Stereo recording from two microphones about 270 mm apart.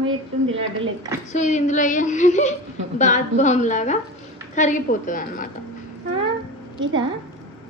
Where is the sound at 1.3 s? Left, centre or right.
Left.